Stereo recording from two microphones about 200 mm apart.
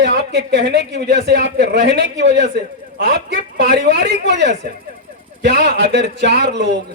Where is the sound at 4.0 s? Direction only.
60° right (ahead or behind).